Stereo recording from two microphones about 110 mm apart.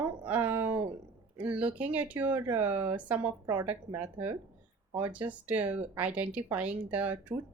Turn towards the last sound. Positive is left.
turn(degrees=-15)  # may be behind; listen again after turning